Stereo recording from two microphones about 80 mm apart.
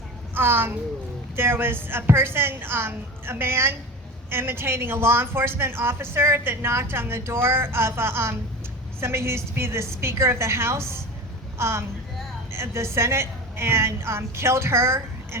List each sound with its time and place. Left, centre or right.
0.3 s a woman's voice: right